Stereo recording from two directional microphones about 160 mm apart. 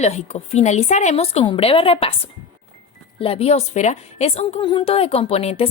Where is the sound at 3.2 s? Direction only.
35° left (ahead or behind).